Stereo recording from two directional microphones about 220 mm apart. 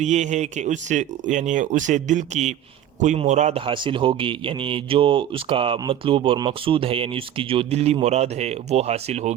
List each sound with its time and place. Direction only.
0.0 s a man's voice: 30° right (ahead or behind)